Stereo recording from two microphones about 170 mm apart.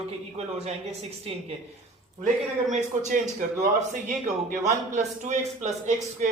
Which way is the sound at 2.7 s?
45° right (ahead or behind).